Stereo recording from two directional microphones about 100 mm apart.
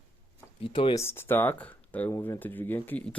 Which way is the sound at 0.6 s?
60° left (ahead or behind).